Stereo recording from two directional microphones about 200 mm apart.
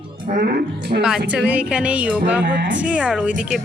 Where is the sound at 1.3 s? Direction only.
5° right (ahead or behind).